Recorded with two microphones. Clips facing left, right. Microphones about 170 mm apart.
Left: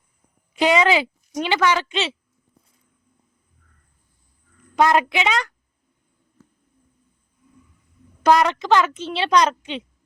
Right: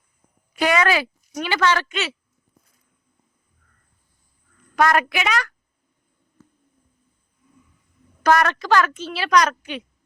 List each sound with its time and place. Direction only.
0.5 s a woman's voice: 20° left (ahead or behind)
4.7 s a woman's voice: 20° left (ahead or behind)
8.2 s a woman's voice: 15° left (ahead or behind)